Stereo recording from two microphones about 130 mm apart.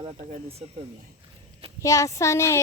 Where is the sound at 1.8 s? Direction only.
25° left (ahead or behind).